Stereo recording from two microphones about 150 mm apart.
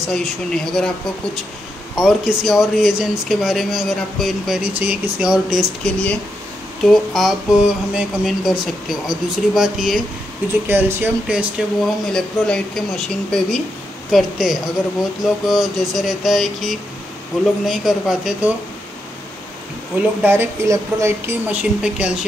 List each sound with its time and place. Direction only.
0.0 s speech: 5° left (ahead or behind)
6.8 s speech: centre (ahead or behind)
10.7 s speech: 15° right (ahead or behind)
20.0 s a woman's voice: 15° right (ahead or behind)